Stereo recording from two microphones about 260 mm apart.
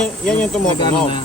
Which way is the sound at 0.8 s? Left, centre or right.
Centre.